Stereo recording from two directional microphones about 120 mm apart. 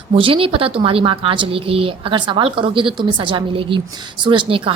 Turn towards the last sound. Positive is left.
turn(degrees=-45)  # may be behind; listen again after turning